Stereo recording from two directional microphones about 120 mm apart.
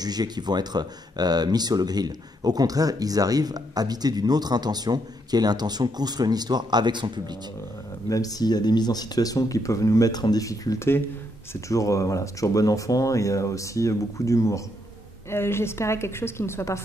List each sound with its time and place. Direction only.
0.0 s speech: 35° right (ahead or behind)
8.1 s speech: 30° left (ahead or behind)